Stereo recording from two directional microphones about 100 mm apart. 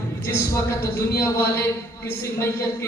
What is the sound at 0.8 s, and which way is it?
A man's voice, 30° left (ahead or behind).